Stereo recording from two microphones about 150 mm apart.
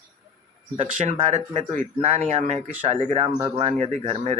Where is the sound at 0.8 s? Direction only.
55° right (ahead or behind).